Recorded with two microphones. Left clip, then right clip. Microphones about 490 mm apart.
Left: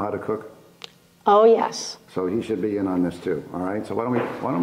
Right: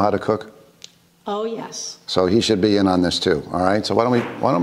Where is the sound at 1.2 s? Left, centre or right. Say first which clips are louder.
Left 11 dB; left.